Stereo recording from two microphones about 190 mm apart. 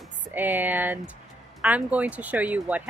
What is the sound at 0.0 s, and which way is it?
Music, 10° right (ahead or behind).